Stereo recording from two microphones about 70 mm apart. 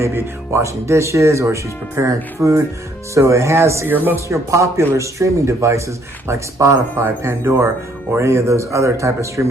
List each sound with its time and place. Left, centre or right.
0.0 s speech: right
3.8 s speech: right
4.3 s speech: right